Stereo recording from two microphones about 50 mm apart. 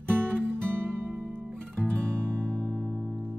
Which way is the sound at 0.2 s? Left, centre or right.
Right.